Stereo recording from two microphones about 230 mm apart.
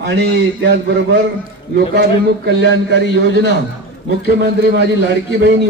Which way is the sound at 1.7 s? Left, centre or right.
Right.